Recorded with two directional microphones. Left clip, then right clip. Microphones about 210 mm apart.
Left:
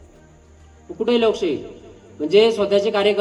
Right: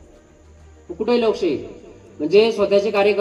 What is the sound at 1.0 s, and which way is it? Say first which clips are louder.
A man's voice: even; 20° right (ahead or behind).